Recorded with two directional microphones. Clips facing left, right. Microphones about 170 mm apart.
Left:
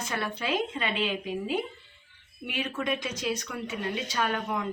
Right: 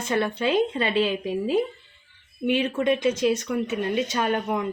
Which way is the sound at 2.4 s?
25° right (ahead or behind).